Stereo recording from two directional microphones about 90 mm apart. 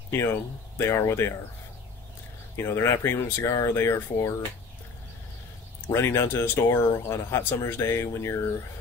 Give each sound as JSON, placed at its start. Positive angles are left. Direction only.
{"t": 0.1, "sound": "speech", "side_deg": 30}
{"t": 2.5, "sound": "speech", "side_deg": 30}
{"t": 5.9, "sound": "speech", "side_deg": 25}